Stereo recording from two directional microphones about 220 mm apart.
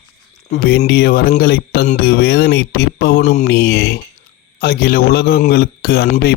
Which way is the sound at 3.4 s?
50° left (ahead or behind).